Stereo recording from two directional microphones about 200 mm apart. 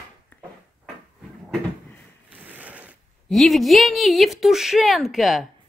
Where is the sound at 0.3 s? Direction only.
10° left (ahead or behind).